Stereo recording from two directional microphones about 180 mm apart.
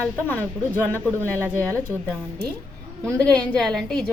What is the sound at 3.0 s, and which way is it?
A woman's voice, 5° left (ahead or behind).